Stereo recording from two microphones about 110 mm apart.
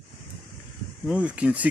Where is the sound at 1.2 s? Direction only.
10° right (ahead or behind).